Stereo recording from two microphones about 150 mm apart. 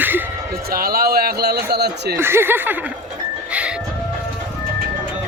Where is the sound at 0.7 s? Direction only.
80° right.